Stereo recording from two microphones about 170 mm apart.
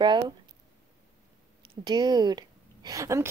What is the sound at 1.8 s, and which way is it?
A woman's voice, 25° right (ahead or behind).